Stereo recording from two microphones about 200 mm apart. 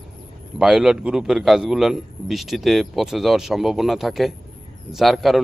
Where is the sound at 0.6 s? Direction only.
5° right (ahead or behind).